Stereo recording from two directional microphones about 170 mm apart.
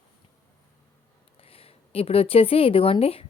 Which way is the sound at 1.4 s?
35° left (ahead or behind).